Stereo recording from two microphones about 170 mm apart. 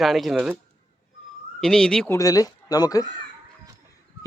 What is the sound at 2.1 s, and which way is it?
Speech, 20° left (ahead or behind).